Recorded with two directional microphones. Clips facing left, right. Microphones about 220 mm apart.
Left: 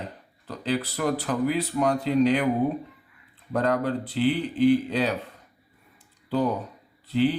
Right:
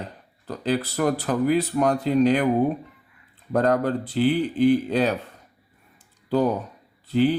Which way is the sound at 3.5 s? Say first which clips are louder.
Right 3 dB; 45° right (ahead or behind).